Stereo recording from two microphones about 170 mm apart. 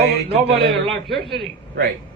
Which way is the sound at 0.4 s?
70° right (ahead or behind).